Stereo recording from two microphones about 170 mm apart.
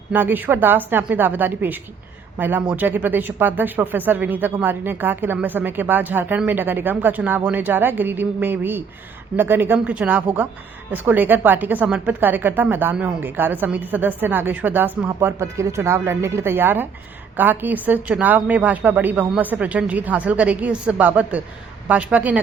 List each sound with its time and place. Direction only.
0.1 s speech: 10° right (ahead or behind)